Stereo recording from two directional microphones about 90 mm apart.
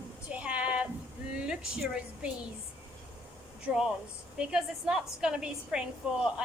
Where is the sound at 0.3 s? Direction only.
15° right (ahead or behind).